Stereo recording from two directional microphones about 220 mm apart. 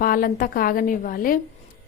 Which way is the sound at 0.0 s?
40° left (ahead or behind).